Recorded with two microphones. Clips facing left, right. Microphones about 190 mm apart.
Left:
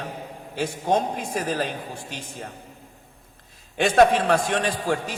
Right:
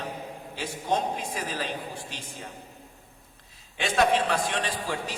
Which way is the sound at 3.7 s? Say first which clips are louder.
Left 6 dB; 50° left (ahead or behind).